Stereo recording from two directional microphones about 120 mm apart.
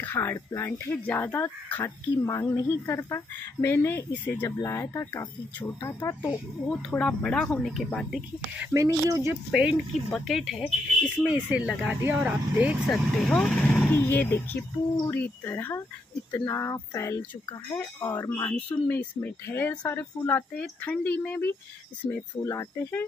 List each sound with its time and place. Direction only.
0.0 s speech: 15° left (ahead or behind)
6.7 s speech: 10° left (ahead or behind)
8.7 s speech: 25° right (ahead or behind)
9.5 s speech: 10° right (ahead or behind)
12.9 s speech: 5° left (ahead or behind)
13.9 s speech: 20° left (ahead or behind)